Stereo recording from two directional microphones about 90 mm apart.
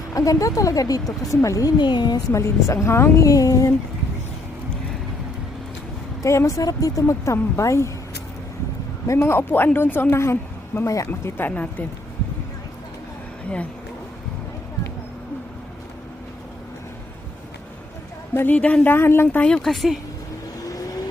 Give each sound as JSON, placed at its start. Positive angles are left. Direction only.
{"t": 0.1, "sound": "a woman's voice", "side_deg": 40}
{"t": 1.8, "sound": "a woman's voice", "side_deg": 55}
{"t": 2.3, "sound": "a woman's voice", "side_deg": 35}
{"t": 6.2, "sound": "a woman's voice", "side_deg": 35}
{"t": 9.0, "sound": "a woman's voice", "side_deg": 30}
{"t": 18.3, "sound": "speech", "side_deg": 15}
{"t": 19.4, "sound": "speech", "side_deg": 10}
{"t": 20.7, "sound": "vehicle", "side_deg": 40}